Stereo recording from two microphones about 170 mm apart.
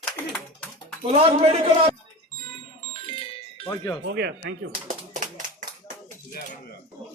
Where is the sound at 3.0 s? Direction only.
30° left (ahead or behind).